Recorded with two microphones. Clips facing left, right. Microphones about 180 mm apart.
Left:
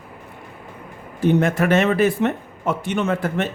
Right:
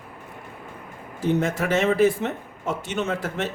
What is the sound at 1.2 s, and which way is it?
Speech, 65° left (ahead or behind).